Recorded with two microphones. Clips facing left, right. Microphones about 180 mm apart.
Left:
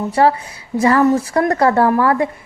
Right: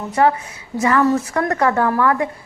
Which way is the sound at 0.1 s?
30° left (ahead or behind).